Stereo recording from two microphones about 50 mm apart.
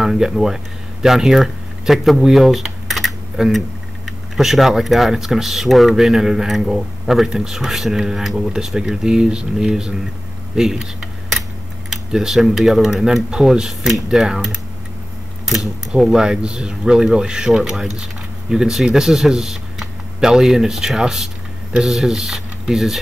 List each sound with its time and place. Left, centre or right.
0.0 s speech: centre
11.9 s speech: centre
16.0 s speech: centre